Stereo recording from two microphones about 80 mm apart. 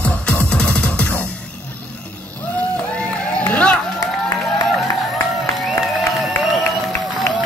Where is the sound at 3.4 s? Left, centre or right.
Centre.